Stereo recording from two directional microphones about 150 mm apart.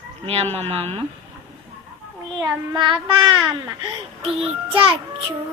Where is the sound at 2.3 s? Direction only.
30° right (ahead or behind).